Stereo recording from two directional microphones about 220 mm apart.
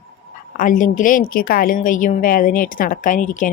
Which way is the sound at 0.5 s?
35° left (ahead or behind).